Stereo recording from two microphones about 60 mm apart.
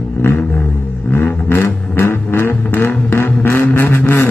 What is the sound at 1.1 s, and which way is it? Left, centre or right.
Vehicle, left.